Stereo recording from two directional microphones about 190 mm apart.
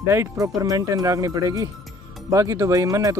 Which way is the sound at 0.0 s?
15° right (ahead or behind).